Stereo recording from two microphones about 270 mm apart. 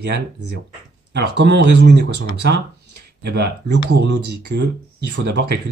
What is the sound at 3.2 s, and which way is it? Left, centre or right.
Speech, right.